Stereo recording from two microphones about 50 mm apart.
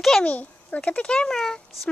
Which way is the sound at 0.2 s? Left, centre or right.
Left.